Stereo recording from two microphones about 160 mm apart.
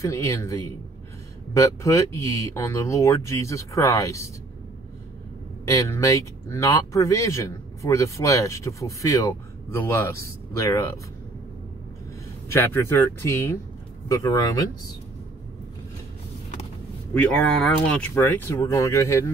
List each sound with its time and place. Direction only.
0.0 s speech: 20° left (ahead or behind)
5.7 s speech: 20° left (ahead or behind)
12.4 s speech: 15° left (ahead or behind)
17.1 s speech: 5° left (ahead or behind)
18.1 s speech: 15° left (ahead or behind)